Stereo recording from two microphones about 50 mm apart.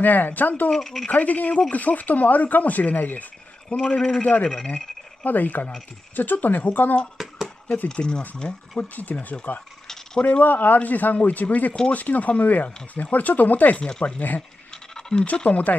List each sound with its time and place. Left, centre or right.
0.0 s speech: left
0.7 s speech: centre
1.1 s speech: left
3.6 s a man's voice: centre
4.2 s speech: left
7.2 s a sound: centre
7.6 s speech: left
7.9 s speech: centre
8.7 s speech: left
13.8 s speech: centre
14.7 s a sound: centre
15.3 s speech: left